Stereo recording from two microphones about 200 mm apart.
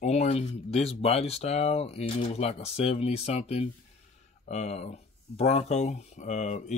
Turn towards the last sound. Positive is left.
turn(degrees=35)  # may be behind; listen again after turning